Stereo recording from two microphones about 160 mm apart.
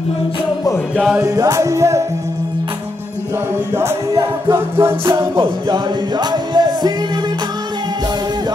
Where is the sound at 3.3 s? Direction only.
15° right (ahead or behind).